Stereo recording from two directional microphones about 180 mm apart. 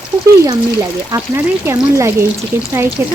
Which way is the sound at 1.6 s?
15° right (ahead or behind).